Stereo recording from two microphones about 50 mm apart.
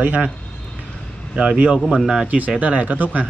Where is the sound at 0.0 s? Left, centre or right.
Right.